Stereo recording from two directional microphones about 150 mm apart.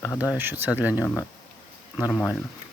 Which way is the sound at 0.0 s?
20° left (ahead or behind).